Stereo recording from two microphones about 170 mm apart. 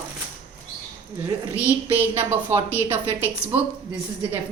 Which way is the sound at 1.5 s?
10° right (ahead or behind).